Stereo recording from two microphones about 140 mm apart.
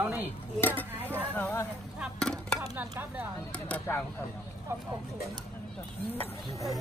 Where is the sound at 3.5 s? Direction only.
10° left (ahead or behind).